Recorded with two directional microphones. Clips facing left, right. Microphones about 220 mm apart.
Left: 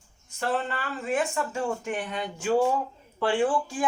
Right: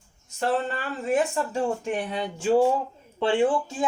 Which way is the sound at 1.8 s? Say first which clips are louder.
Right 3 dB; 35° right (ahead or behind).